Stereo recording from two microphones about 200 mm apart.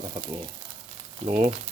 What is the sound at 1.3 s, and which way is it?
Speech, 35° right (ahead or behind).